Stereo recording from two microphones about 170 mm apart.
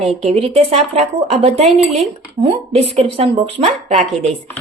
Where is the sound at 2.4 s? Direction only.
25° right (ahead or behind).